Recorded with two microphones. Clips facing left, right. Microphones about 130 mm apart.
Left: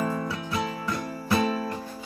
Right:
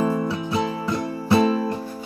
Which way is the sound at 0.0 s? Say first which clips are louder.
Right 6 dB; 20° right (ahead or behind).